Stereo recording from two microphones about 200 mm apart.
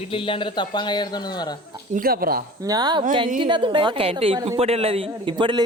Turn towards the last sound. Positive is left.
turn(degrees=-25)  # may be behind; listen again after turning